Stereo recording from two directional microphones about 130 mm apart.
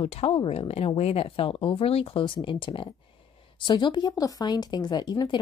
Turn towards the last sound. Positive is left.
turn(degrees=35)  # may be behind; listen again after turning